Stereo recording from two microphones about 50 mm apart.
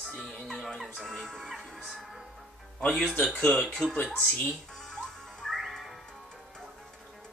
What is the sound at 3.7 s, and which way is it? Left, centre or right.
Speech, centre.